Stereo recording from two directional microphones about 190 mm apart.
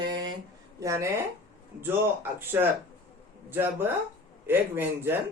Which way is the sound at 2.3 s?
10° right (ahead or behind).